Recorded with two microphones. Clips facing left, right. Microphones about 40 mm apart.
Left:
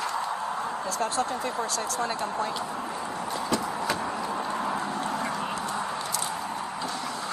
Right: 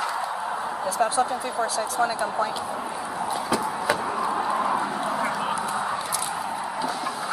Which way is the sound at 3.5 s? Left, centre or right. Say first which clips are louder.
Right 4 dB; centre.